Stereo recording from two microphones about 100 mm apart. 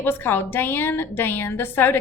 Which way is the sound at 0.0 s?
20° left (ahead or behind).